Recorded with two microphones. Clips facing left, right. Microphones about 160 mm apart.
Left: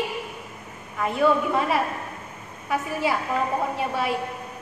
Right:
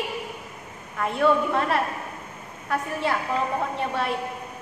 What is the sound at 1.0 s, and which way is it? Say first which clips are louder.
Speech: even; centre (ahead or behind).